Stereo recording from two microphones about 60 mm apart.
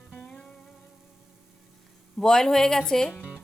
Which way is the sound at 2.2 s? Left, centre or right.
Centre.